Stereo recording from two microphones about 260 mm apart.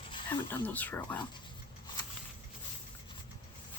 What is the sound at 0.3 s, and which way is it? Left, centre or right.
Speech, centre.